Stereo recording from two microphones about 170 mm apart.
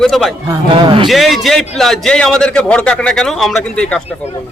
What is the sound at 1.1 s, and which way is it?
A man's voice, centre (ahead or behind).